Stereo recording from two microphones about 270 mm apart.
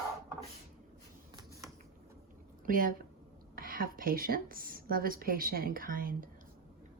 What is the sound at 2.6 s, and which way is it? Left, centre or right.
A woman's voice, right.